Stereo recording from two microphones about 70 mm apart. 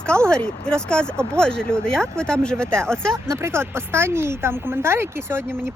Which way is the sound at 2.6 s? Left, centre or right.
Right.